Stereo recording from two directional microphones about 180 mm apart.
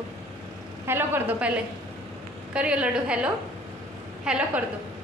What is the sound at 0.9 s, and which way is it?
A woman's voice, 10° right (ahead or behind).